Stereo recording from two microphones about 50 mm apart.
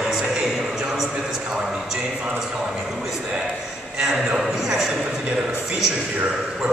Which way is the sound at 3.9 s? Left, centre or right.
Centre.